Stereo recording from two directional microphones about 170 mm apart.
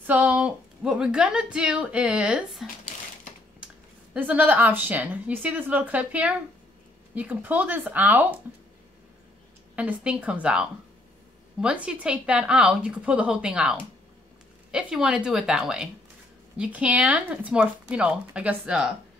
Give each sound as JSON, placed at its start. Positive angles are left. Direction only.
{"t": 0.0, "sound": "a woman's voice", "side_deg": -10}
{"t": 9.8, "sound": "speech", "side_deg": -10}